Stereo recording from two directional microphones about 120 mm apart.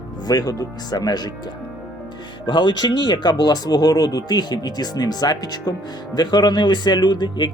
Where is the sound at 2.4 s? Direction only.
40° left (ahead or behind).